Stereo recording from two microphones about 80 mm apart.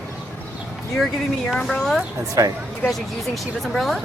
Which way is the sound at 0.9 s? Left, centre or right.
Centre.